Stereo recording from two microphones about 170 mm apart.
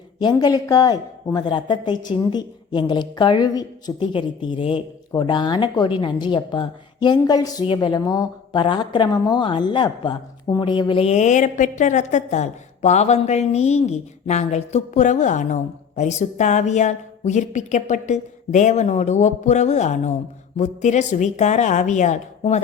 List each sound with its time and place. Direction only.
0.2 s a woman's voice: 25° left (ahead or behind); by 22.6 s 40° left (ahead or behind)